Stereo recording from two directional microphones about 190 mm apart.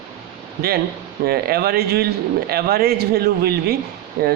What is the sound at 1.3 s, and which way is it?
Speech, 55° right (ahead or behind).